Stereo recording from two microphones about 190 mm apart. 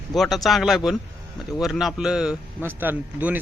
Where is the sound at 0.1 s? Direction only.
Centre (ahead or behind).